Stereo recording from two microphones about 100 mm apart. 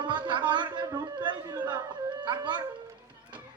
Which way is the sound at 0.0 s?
50° right (ahead or behind).